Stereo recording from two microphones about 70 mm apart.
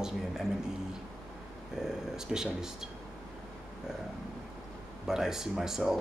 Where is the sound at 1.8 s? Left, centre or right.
Centre.